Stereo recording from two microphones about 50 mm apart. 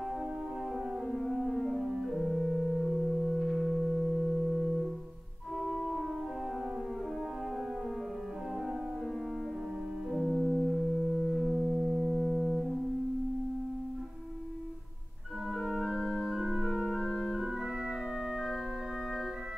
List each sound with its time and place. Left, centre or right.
1.2 s organ: centre
10.1 s music: centre
12.2 s music: centre
15.5 s organ: centre